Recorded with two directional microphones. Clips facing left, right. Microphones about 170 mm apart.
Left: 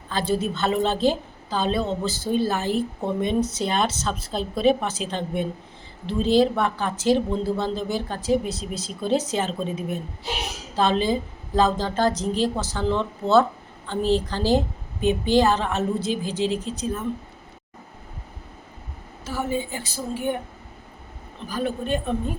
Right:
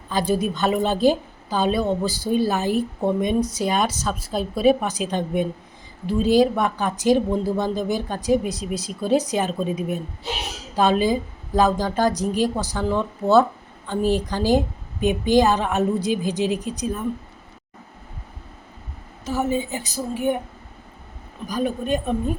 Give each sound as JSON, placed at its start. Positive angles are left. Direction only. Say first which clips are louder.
{"t": 0.1, "sound": "a woman's voice", "louder": "right 2 dB", "side_deg": -15}
{"t": 19.2, "sound": "a woman's voice", "louder": "right 4 dB", "side_deg": -20}
{"t": 21.4, "sound": "a woman's voice", "louder": "right 3 dB", "side_deg": -15}